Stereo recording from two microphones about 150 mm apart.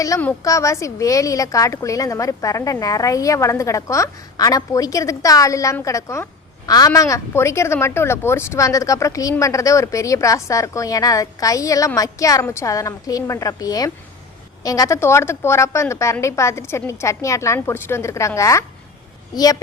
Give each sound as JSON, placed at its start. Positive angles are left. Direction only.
{"t": 0.1, "sound": "a woman's voice", "side_deg": 20}